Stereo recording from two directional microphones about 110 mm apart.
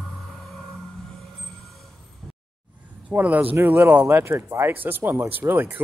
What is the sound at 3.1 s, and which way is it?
Speech, 15° right (ahead or behind).